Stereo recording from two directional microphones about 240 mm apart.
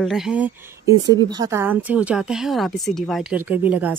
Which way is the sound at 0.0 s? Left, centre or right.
Centre.